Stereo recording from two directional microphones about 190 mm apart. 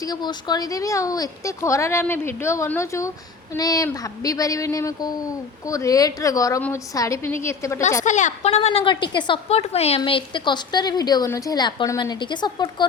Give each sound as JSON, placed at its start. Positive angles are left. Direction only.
{"t": 0.1, "sound": "a woman's voice", "side_deg": 20}
{"t": 8.0, "sound": "a woman's voice", "side_deg": 40}